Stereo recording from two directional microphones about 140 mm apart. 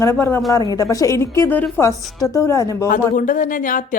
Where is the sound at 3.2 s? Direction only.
70° left (ahead or behind).